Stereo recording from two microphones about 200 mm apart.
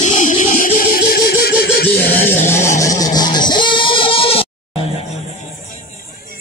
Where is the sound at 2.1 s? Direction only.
10° left (ahead or behind).